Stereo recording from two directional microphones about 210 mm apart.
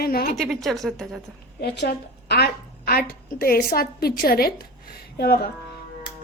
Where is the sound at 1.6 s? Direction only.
50° left (ahead or behind).